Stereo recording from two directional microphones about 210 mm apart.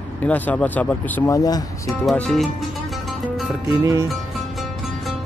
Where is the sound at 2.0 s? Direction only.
5° left (ahead or behind).